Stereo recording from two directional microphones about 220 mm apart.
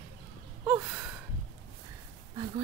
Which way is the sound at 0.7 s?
5° right (ahead or behind).